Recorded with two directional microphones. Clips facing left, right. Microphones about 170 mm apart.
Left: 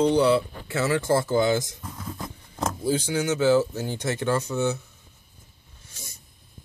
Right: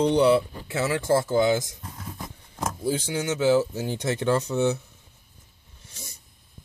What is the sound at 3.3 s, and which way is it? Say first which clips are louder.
Speech: even; 5° right (ahead or behind).